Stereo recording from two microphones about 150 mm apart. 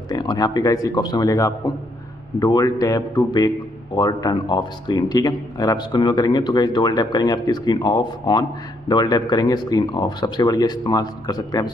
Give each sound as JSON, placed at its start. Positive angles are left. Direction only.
{"t": 0.1, "sound": "a man's voice", "side_deg": 25}